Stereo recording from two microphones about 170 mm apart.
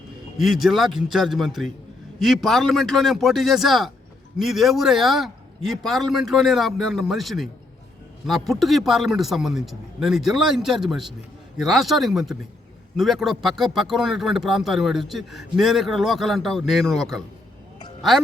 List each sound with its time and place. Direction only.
0.3 s speech: centre (ahead or behind)